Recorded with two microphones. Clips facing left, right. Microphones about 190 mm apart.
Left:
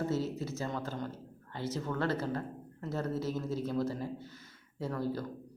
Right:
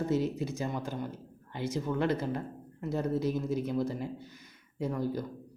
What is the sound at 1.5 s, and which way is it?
Speech, 15° right (ahead or behind).